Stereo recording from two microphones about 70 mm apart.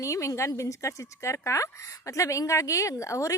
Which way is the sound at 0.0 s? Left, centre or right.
Left.